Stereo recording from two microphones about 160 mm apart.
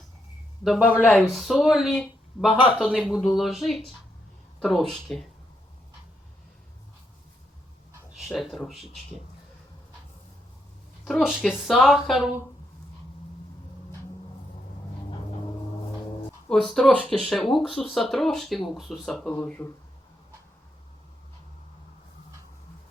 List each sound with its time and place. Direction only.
0.6 s speech: 5° left (ahead or behind)
8.1 s speech: centre (ahead or behind)
11.0 s speech: centre (ahead or behind)
15.1 s vehicle: 30° left (ahead or behind)
16.5 s speech: centre (ahead or behind)